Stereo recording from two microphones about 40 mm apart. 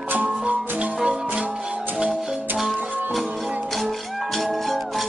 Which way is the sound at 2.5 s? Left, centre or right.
Centre.